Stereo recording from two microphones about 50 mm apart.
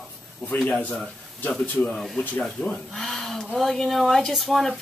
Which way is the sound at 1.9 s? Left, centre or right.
Centre.